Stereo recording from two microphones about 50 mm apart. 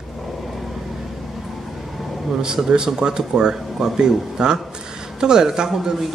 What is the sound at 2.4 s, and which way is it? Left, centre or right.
Speech, centre.